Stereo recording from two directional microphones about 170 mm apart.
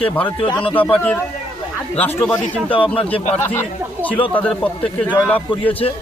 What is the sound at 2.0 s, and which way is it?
Speech, 10° left (ahead or behind).